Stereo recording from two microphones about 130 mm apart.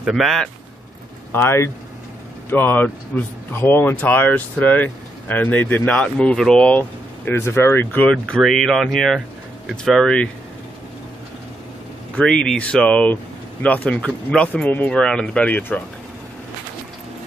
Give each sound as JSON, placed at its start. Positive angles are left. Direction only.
{"t": 0.1, "sound": "speech", "side_deg": 0}
{"t": 1.3, "sound": "speech", "side_deg": 20}
{"t": 12.2, "sound": "speech", "side_deg": 5}